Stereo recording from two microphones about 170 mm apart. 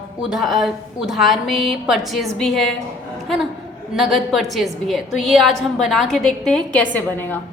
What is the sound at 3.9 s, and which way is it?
A woman's voice, centre (ahead or behind).